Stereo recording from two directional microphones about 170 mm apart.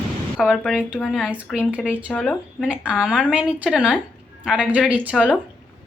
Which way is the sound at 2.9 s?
5° right (ahead or behind).